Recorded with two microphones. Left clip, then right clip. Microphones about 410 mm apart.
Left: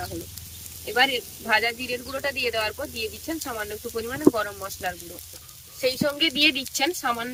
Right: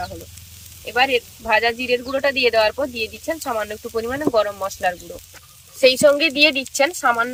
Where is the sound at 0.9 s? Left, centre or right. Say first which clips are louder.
Right 4 dB; centre.